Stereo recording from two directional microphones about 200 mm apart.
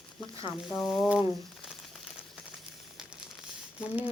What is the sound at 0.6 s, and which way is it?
Speech, centre (ahead or behind).